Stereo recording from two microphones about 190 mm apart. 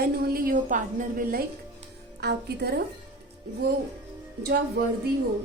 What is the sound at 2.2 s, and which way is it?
Speech, 60° right (ahead or behind).